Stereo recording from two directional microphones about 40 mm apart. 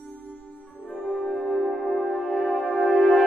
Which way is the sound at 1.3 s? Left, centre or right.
Left.